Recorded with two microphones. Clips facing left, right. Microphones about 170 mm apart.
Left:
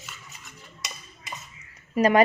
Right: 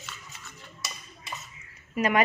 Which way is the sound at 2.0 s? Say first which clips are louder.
Left 5 dB; 35° left (ahead or behind).